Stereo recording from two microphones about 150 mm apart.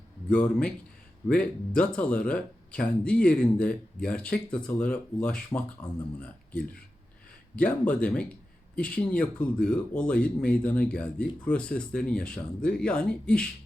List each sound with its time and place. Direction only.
0.3 s speech: 10° left (ahead or behind)